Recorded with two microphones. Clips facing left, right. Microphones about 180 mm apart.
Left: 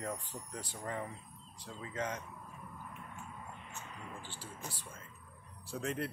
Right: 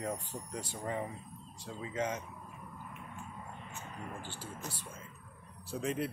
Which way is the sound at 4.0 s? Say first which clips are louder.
Right 7 dB; 50° right (ahead or behind).